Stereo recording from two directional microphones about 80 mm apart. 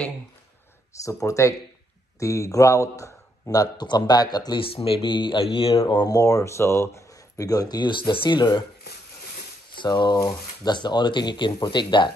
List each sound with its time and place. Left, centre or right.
1.0 s speech: left
3.7 s speech: left
6.0 s speech: left
9.8 s speech: left